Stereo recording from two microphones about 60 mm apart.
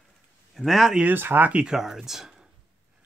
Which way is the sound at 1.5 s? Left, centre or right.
Centre.